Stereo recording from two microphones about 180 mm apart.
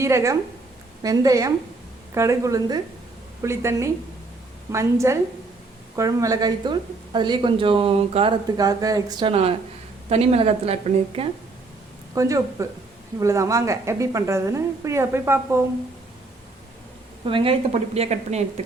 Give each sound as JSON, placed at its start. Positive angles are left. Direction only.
{"t": 0.0, "sound": "a woman's voice", "side_deg": -15}
{"t": 8.5, "sound": "a woman's voice", "side_deg": -20}
{"t": 12.1, "sound": "a woman's voice", "side_deg": -15}
{"t": 17.2, "sound": "a woman's voice", "side_deg": -30}